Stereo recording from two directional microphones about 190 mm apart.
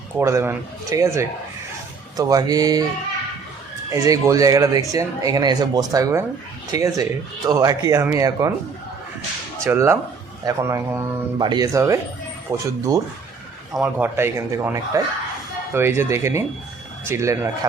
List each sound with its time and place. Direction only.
0.2 s speech: 15° right (ahead or behind)
3.9 s speech: 15° right (ahead or behind)
9.6 s speech: 15° right (ahead or behind)